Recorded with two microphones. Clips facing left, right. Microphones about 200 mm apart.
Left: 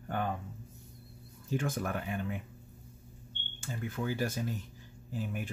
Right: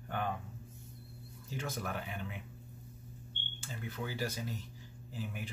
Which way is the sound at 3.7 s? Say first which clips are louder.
Left 6 dB; 50° left (ahead or behind).